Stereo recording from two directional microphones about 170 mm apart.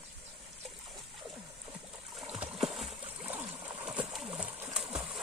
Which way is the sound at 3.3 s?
10° right (ahead or behind).